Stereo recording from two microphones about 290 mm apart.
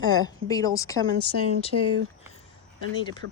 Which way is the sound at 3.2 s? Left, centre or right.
Right.